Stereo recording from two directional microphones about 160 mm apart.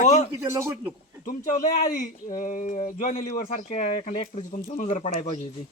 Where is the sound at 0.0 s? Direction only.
45° left (ahead or behind).